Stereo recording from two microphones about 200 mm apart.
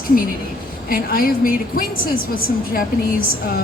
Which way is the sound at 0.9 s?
45° left (ahead or behind).